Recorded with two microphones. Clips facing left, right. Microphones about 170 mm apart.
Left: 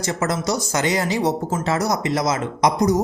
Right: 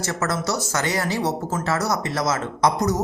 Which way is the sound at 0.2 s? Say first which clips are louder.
Left 2 dB; 15° left (ahead or behind).